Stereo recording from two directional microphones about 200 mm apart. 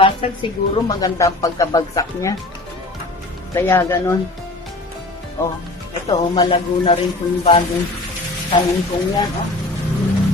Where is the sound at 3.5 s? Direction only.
10° left (ahead or behind).